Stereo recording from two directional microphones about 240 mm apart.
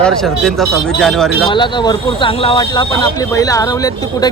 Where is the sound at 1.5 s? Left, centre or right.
Centre.